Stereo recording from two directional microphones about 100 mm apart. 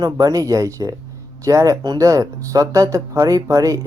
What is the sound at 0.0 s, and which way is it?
Speech, 35° right (ahead or behind).